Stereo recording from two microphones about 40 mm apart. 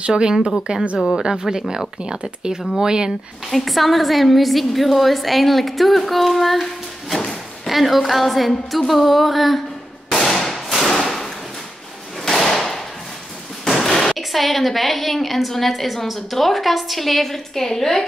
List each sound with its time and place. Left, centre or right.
0.0 s speech: right
0.9 s a woman's voice: centre
1.2 s speech: centre
3.4 s a woman's voice: centre
10.1 s firecracker: centre
11.1 s a sound: centre
12.2 s slam: centre
14.1 s a woman's voice: centre